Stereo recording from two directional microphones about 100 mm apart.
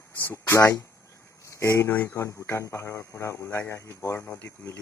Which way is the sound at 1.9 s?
20° left (ahead or behind).